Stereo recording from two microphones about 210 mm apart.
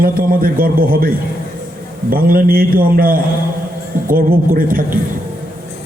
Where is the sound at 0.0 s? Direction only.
45° right (ahead or behind).